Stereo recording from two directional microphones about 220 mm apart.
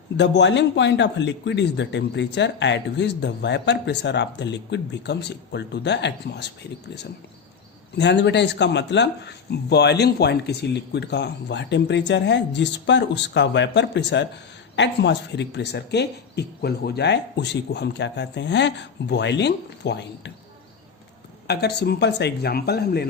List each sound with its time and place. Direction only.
0.2 s speech: 55° left (ahead or behind)
7.9 s speech: 50° left (ahead or behind)
21.4 s speech: 50° left (ahead or behind)